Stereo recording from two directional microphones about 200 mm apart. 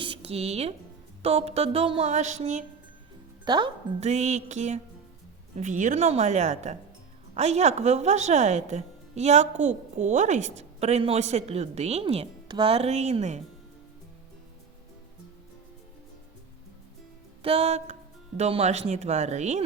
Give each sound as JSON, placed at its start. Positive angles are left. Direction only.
{"t": 0.0, "sound": "a sound", "side_deg": -30}
{"t": 1.2, "sound": "a woman's voice", "side_deg": -30}
{"t": 3.4, "sound": "speech", "side_deg": -20}
{"t": 4.0, "sound": "a woman's voice", "side_deg": -35}
{"t": 17.4, "sound": "a woman's voice", "side_deg": -30}